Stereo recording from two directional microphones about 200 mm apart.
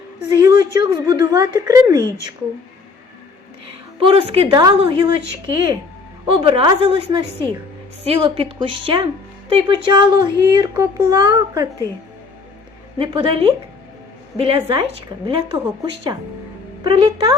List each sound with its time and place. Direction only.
0.4 s a woman's voice: 20° right (ahead or behind)
4.0 s speech: 25° right (ahead or behind)
6.2 s speech: 25° right (ahead or behind)
13.0 s speech: 25° right (ahead or behind)